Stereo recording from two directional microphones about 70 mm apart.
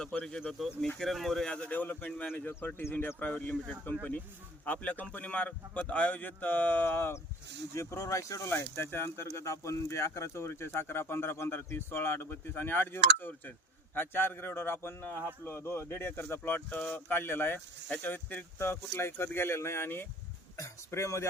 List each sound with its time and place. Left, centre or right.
0.0 s speech: centre
0.6 s speech: centre
1.5 s speech: centre; by 7.2 s left
7.8 s speech: left
16.4 s speech: left
20.6 s speech: left